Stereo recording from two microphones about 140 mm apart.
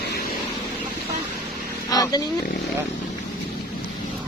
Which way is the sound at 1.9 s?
25° left (ahead or behind).